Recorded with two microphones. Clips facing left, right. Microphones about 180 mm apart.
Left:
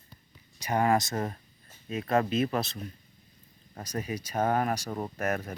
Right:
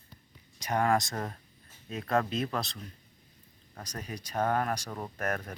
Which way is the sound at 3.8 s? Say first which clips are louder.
Left 7 dB; 5° left (ahead or behind).